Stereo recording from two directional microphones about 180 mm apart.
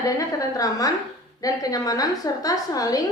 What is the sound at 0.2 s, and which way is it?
A woman's voice, 20° left (ahead or behind).